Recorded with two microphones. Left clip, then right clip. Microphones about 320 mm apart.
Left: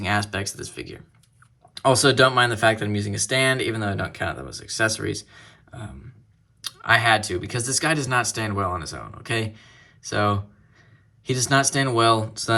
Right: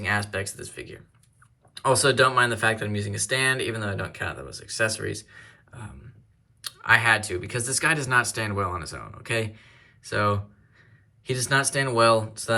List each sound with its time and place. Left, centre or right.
0.0 s speech: centre